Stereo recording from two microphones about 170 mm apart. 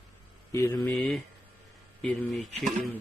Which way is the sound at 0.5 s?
20° left (ahead or behind).